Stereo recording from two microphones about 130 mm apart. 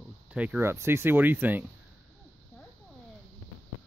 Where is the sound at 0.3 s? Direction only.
10° right (ahead or behind).